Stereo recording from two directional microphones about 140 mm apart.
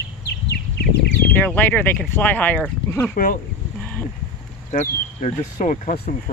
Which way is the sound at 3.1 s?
80° left.